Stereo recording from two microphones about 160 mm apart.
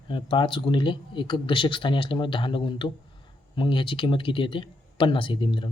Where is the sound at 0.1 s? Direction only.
30° left (ahead or behind).